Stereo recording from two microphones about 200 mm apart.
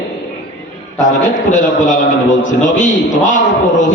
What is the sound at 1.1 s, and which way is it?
A man's voice, 40° left (ahead or behind).